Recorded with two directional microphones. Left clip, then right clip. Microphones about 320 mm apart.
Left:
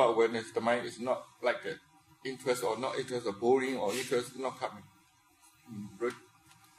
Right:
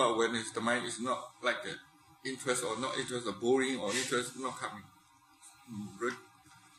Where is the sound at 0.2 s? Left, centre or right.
Left.